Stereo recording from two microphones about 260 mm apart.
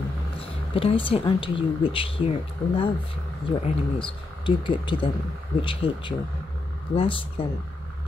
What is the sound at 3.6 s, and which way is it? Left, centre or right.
Speech, centre.